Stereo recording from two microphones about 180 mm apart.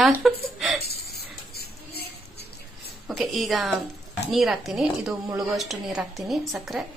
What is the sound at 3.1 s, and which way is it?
A woman's voice, centre (ahead or behind).